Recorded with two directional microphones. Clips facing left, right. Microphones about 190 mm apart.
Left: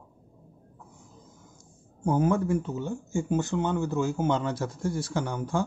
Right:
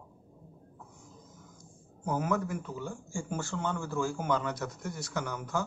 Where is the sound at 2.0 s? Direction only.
30° left (ahead or behind).